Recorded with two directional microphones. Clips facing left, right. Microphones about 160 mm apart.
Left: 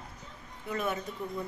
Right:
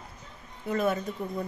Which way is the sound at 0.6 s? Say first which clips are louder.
Right 6 dB; 35° right (ahead or behind).